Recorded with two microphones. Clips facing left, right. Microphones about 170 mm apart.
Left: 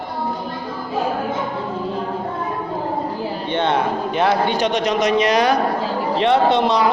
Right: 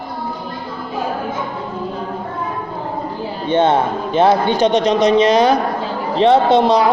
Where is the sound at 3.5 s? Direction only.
40° right (ahead or behind).